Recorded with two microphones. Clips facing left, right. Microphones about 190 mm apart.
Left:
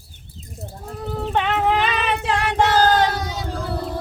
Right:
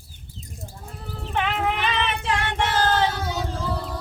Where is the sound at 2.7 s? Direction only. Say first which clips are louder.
Left 5 dB; 40° left (ahead or behind).